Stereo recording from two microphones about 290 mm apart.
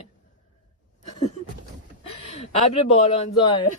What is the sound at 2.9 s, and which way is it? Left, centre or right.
Speech, centre.